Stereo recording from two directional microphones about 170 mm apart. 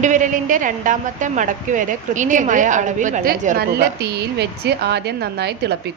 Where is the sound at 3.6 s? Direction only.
70° right (ahead or behind).